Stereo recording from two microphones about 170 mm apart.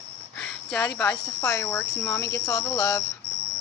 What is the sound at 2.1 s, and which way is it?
Speech, 20° left (ahead or behind).